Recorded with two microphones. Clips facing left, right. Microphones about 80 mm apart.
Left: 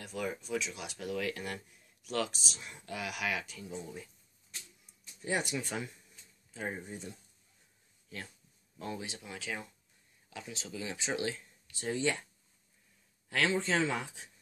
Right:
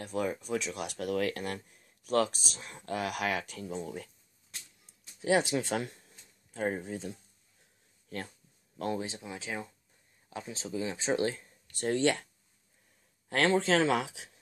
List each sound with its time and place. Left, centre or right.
0.0 s speech: right
5.2 s speech: right
6.5 s speech: right
8.9 s speech: right
11.8 s speech: right
13.3 s speech: right
13.6 s speech: right